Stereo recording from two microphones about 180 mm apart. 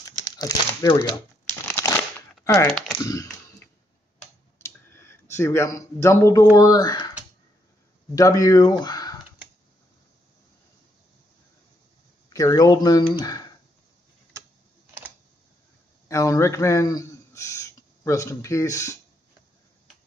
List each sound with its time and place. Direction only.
0.2 s speech: 20° left (ahead or behind)
1.7 s a sound: 10° left (ahead or behind)
2.4 s speech: 20° left (ahead or behind)
3.0 s a sound: 20° left (ahead or behind)
6.5 s speech: 20° left (ahead or behind)
8.1 s speech: 20° left (ahead or behind)
12.3 s speech: 20° left (ahead or behind)
16.1 s a man's voice: 15° left (ahead or behind)